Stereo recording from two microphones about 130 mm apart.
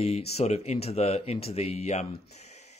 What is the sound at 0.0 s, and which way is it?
Speech, 55° left (ahead or behind).